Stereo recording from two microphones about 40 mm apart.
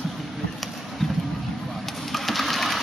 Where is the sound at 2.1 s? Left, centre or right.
Centre.